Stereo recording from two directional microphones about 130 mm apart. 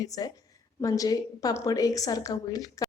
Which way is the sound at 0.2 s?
30° left (ahead or behind).